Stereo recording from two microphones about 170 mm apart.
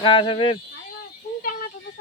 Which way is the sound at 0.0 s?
30° left (ahead or behind).